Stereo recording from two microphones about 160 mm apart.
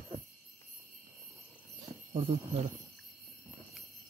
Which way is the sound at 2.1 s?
40° right (ahead or behind).